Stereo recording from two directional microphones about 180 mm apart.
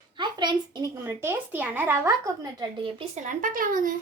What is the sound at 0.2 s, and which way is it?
Speech, 25° right (ahead or behind).